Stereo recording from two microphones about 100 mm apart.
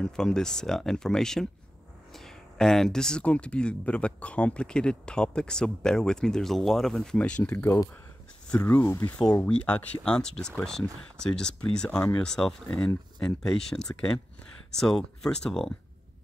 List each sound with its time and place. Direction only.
0.0 s speech: 5° left (ahead or behind)
7.5 s speech: 20° left (ahead or behind); by 15.7 s 5° left (ahead or behind)